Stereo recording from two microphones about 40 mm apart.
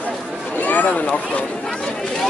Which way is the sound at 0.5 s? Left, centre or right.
Left.